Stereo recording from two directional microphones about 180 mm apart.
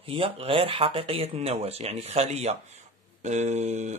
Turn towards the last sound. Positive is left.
turn(degrees=-40)  # may be behind; listen again after turning